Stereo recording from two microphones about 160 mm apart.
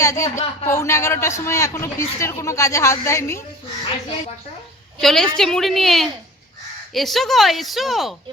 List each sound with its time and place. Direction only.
0.0 s a man's voice: 20° left (ahead or behind)
4.9 s speech: centre (ahead or behind)